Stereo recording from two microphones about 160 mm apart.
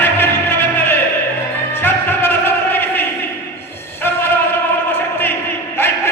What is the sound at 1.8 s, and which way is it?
Music, 15° left (ahead or behind).